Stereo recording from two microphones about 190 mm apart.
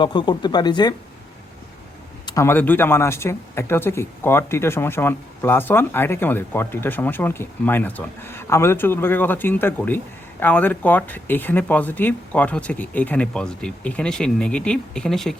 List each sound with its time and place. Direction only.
0.0 s speech: 25° left (ahead or behind)
2.2 s speech: 15° left (ahead or behind)